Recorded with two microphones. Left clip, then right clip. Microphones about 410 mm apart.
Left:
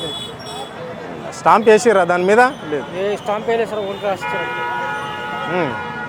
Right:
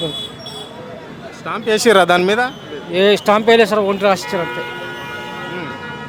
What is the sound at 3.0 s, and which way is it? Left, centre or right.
Speech, right.